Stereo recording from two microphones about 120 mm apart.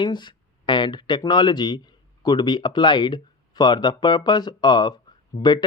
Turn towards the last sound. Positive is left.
turn(degrees=55)  # may be behind; listen again after turning